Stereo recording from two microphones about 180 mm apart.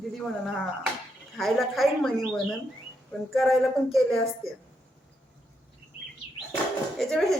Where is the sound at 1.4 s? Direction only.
Centre (ahead or behind).